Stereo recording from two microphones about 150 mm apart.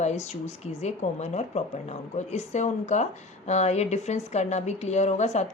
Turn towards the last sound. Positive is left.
turn(degrees=50)  # may be behind; listen again after turning